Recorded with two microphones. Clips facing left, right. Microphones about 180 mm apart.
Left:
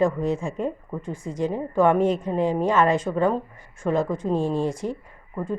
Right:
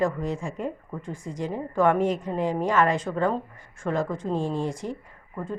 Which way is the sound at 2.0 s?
15° right (ahead or behind).